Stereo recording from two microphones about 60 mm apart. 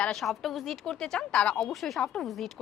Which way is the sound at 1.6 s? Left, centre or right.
Centre.